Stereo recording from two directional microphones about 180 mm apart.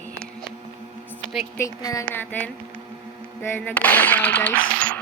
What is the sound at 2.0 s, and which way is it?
Speech, 10° left (ahead or behind).